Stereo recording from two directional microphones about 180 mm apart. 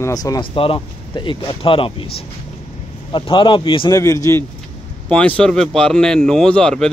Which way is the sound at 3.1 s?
25° left (ahead or behind).